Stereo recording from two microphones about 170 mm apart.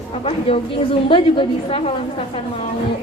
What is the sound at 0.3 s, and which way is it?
A woman's voice, 35° left (ahead or behind).